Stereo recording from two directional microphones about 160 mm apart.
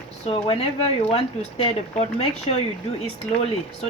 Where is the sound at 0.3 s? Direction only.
35° left (ahead or behind).